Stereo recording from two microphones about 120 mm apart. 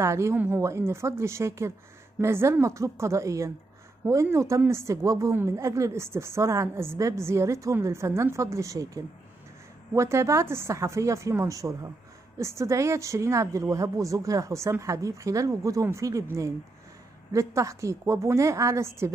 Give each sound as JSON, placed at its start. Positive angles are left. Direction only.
{"t": 0.0, "sound": "speech", "side_deg": -25}